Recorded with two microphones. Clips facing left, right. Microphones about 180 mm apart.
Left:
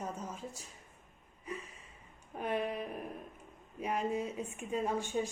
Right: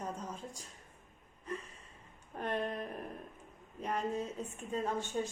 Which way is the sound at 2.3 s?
5° left (ahead or behind).